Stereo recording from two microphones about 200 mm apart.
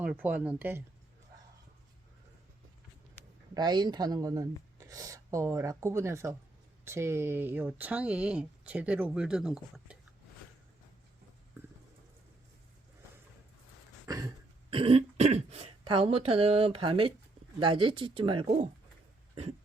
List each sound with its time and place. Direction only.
0.0 s speech: 5° right (ahead or behind)
3.5 s speech: 20° right (ahead or behind); by 10.0 s 5° right (ahead or behind)
14.1 s cough: 20° right (ahead or behind)
14.7 s speech: 25° right (ahead or behind)